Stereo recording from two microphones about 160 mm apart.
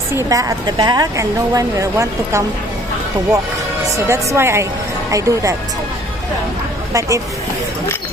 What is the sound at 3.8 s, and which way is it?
A woman's voice, 20° right (ahead or behind).